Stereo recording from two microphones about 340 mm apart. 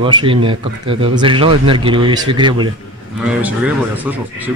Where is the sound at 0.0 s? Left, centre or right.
Centre.